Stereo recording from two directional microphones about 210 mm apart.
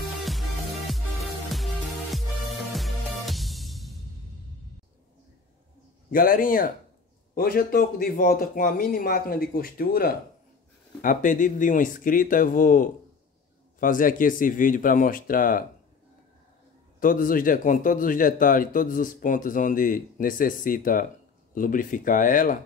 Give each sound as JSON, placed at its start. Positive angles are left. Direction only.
{"t": 1.5, "sound": "music", "side_deg": 0}
{"t": 6.1, "sound": "speech", "side_deg": 40}
{"t": 17.0, "sound": "speech", "side_deg": 40}